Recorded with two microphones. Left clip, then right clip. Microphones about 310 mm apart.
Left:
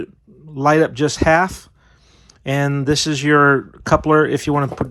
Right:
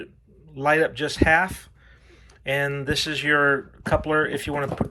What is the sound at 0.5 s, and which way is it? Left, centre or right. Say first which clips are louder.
Speech: left 6 dB; centre.